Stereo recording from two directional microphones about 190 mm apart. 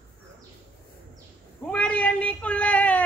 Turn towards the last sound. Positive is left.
turn(degrees=10)  # may be behind; listen again after turning